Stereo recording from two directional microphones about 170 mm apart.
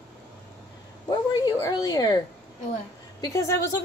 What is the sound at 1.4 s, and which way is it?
Speech, 20° left (ahead or behind).